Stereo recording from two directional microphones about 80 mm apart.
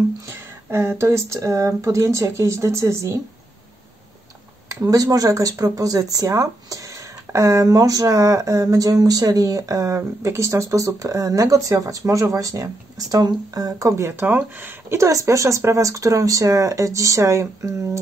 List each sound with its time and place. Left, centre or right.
0.3 s speech: right
4.6 s speech: right
14.0 s speech: right
15.0 s speech: right